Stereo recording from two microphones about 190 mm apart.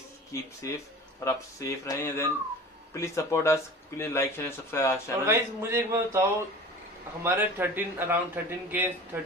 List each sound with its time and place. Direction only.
0.3 s speech: 15° left (ahead or behind)
5.2 s a man's voice: 15° right (ahead or behind)